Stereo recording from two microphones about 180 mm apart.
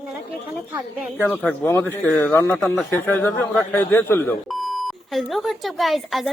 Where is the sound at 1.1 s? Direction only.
10° left (ahead or behind).